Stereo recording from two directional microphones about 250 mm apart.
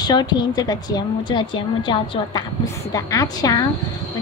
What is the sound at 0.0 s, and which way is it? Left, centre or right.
A woman's voice, centre.